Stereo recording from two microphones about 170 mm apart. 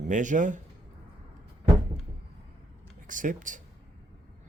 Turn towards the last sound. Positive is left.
turn(degrees=-50)  # may be behind; listen again after turning